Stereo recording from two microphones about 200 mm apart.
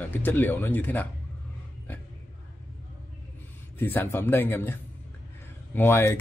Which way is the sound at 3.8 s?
10° left (ahead or behind).